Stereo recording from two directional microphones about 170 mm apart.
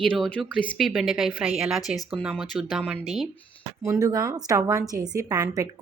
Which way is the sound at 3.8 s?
20° right (ahead or behind).